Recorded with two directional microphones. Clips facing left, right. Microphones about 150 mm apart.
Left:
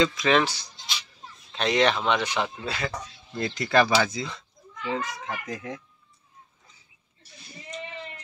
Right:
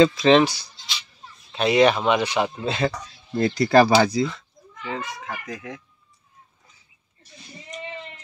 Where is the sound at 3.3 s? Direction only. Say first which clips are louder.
Right 6 dB; 35° right (ahead or behind).